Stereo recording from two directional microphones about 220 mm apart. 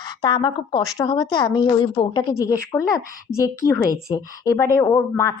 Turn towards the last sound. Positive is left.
turn(degrees=15)  # may be behind; listen again after turning